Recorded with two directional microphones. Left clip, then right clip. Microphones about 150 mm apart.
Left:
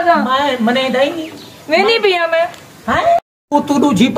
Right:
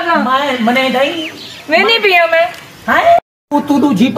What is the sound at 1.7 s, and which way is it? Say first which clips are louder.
Speech: right 2 dB; 30° left (ahead or behind).